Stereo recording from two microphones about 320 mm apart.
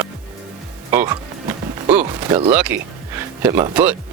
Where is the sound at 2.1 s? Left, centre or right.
Centre.